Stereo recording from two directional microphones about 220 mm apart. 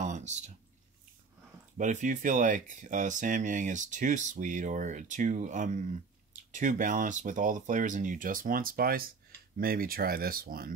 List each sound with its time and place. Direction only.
0.0 s drip: 35° right (ahead or behind)
1.8 s speech: 35° right (ahead or behind)